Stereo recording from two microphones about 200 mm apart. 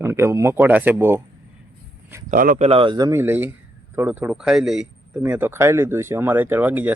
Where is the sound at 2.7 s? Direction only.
25° right (ahead or behind).